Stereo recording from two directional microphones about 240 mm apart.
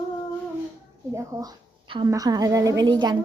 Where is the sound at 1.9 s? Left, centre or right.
Centre.